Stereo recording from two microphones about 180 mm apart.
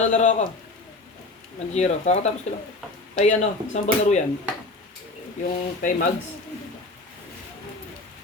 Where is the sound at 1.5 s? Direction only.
40° left (ahead or behind).